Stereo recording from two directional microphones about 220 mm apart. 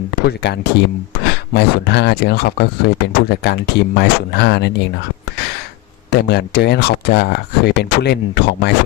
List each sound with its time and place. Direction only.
0.3 s speech: 50° left (ahead or behind)
1.1 s a sound: 50° left (ahead or behind)
1.5 s speech: 50° left (ahead or behind)
6.1 s speech: 50° left (ahead or behind)